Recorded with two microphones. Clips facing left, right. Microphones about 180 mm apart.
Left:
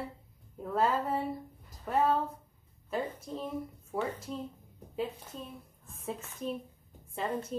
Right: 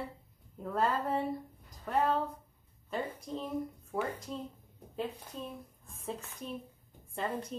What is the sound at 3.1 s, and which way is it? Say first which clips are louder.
Speech: right 1 dB; 5° left (ahead or behind).